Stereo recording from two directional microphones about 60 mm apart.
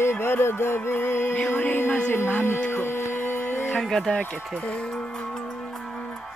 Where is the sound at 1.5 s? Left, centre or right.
Left.